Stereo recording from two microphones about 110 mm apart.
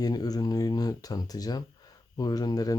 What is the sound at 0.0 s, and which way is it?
Speech, 35° left (ahead or behind).